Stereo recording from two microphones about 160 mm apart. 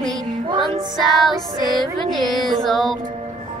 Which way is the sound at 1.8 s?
Centre (ahead or behind).